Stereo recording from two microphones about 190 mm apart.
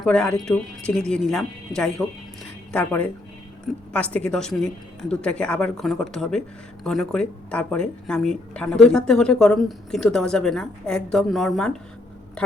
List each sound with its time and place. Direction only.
0.0 s speech: 5° left (ahead or behind)